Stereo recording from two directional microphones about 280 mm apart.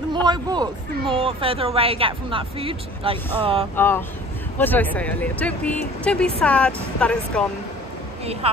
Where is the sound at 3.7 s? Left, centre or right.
Centre.